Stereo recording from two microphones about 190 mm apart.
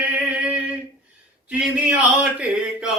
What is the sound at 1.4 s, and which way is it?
Speech, 5° right (ahead or behind).